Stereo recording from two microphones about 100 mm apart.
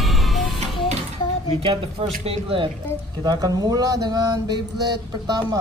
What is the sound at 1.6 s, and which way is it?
Speech, 65° right (ahead or behind).